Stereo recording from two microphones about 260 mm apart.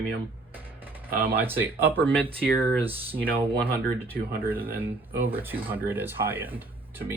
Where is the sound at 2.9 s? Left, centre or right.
Right.